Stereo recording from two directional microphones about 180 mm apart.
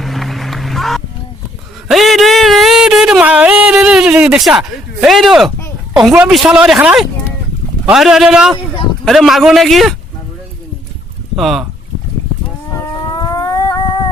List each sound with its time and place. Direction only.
0.0 s run: centre (ahead or behind)
1.9 s a sound: centre (ahead or behind)
5.9 s a woman's voice: 5° right (ahead or behind)
11.3 s speech: centre (ahead or behind)
13.1 s music: 20° left (ahead or behind)